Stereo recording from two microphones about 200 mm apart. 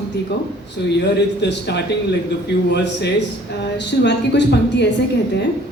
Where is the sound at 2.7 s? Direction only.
60° left (ahead or behind).